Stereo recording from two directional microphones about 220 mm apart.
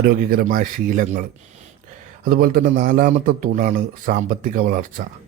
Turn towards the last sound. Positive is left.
turn(degrees=-40)  # may be behind; listen again after turning